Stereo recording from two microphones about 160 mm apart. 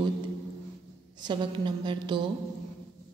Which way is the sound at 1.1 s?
30° right (ahead or behind).